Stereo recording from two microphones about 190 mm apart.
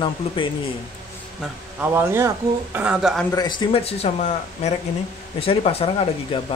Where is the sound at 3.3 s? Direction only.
20° left (ahead or behind).